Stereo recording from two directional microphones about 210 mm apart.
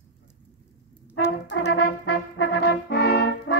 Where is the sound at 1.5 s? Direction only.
55° left (ahead or behind).